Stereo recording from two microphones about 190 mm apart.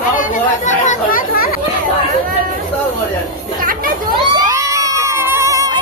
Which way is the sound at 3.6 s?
45° right (ahead or behind).